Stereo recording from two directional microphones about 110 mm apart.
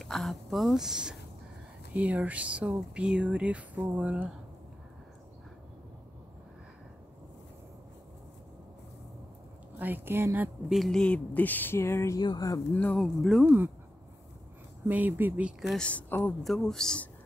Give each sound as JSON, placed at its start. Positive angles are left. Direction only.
{"t": 0.0, "sound": "speech", "side_deg": 0}
{"t": 9.8, "sound": "speech", "side_deg": -15}
{"t": 10.7, "sound": "speech", "side_deg": 0}
{"t": 12.2, "sound": "speech", "side_deg": 35}
{"t": 12.7, "sound": "speech", "side_deg": 15}
{"t": 13.0, "sound": "speech", "side_deg": 0}
{"t": 14.9, "sound": "speech", "side_deg": -15}
{"t": 15.6, "sound": "speech", "side_deg": 0}
{"t": 15.9, "sound": "speech", "side_deg": 15}
{"t": 16.4, "sound": "speech", "side_deg": 5}